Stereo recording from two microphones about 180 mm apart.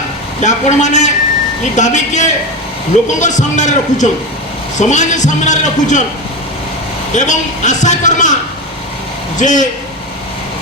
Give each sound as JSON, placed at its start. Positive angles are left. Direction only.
{"t": 0.3, "sound": "a man's voice", "side_deg": 40}
{"t": 7.1, "sound": "a man's voice", "side_deg": 40}
{"t": 9.4, "sound": "a man's voice", "side_deg": 45}